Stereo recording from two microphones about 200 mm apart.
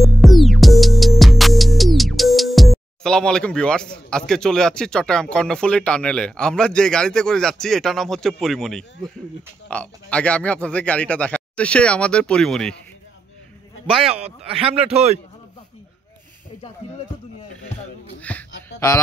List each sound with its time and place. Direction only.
0.0 s music: centre (ahead or behind)
3.0 s speech: 5° left (ahead or behind)
13.9 s a man's voice: 30° right (ahead or behind)
18.3 s a sound: 5° left (ahead or behind)